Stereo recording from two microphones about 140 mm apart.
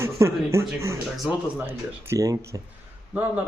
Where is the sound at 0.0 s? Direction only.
20° right (ahead or behind).